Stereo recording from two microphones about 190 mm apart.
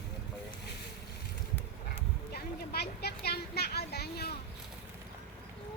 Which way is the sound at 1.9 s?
60° left (ahead or behind).